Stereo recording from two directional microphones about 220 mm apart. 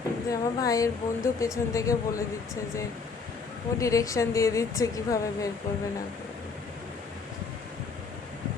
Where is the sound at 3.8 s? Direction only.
15° left (ahead or behind).